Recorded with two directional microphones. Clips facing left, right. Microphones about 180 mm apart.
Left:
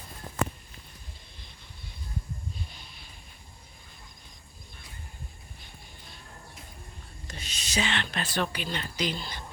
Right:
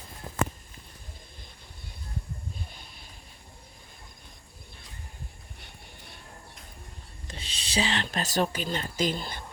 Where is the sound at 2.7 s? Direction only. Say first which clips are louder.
Right 1 dB; 50° right (ahead or behind).